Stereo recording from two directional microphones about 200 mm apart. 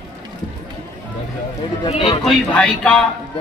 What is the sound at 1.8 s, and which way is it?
Speech, 25° left (ahead or behind).